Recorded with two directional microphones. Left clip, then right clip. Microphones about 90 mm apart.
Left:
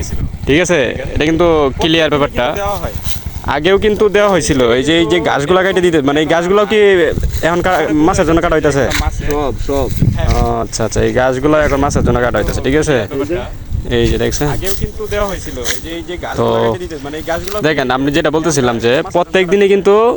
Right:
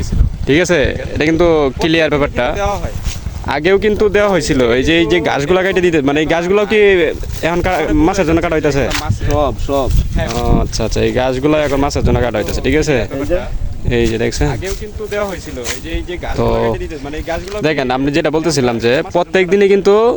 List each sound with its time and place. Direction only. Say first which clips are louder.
0.4 s speech: left 1 dB; 20° right (ahead or behind)
4.5 s speech: left 1 dB; 20° right (ahead or behind); by 8.9 s 5° right (ahead or behind)
8.9 s speech: left 1 dB; 25° left (ahead or behind)
9.6 s speech: even; 5° left (ahead or behind)
10.6 s speech: left 1 dB; 5° right (ahead or behind)
16.4 s speech: left 2 dB; 10° right (ahead or behind)